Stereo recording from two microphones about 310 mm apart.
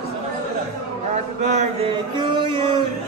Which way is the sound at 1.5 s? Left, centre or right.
Centre.